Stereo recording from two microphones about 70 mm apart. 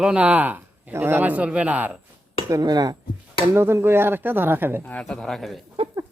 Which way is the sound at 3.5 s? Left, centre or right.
Right.